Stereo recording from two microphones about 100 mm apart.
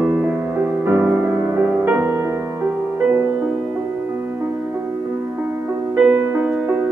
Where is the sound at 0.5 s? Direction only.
20° right (ahead or behind).